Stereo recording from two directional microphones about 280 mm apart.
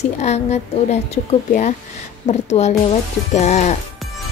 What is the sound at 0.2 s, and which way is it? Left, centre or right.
Speech, left.